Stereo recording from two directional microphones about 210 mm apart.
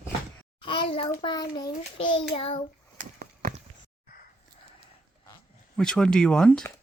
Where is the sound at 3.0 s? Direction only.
40° right (ahead or behind).